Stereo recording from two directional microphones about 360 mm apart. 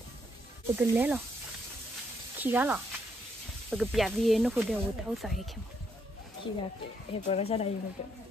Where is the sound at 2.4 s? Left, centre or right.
Centre.